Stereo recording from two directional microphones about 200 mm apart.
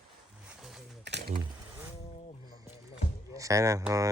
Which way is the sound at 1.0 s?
60° right (ahead or behind).